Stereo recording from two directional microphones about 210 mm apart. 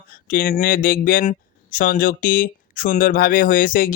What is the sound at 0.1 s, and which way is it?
Speech, 45° left (ahead or behind).